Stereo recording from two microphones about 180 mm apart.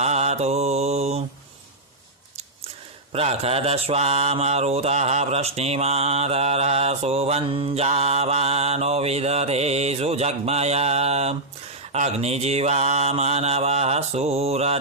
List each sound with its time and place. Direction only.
0.0 s mantra: 40° right (ahead or behind)
3.1 s mantra: 35° right (ahead or behind)